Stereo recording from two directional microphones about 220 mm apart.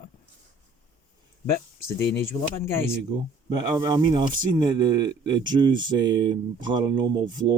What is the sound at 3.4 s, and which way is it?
Speech, 15° right (ahead or behind).